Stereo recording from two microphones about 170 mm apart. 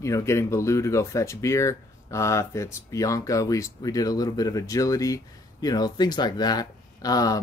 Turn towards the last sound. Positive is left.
turn(degrees=20)  # may be behind; listen again after turning